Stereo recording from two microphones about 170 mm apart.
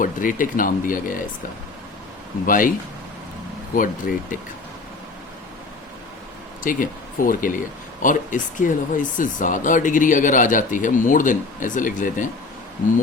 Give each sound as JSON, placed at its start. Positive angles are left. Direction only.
{"t": 0.0, "sound": "speech", "side_deg": 50}
{"t": 2.5, "sound": "speech", "side_deg": 55}
{"t": 3.8, "sound": "speech", "side_deg": 55}
{"t": 6.6, "sound": "speech", "side_deg": 50}